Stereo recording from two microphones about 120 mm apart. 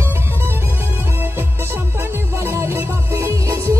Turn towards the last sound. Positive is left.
turn(degrees=-25)  # may be behind; listen again after turning